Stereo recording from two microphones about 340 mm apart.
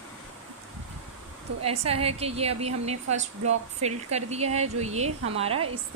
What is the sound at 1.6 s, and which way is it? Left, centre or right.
A woman's voice, centre.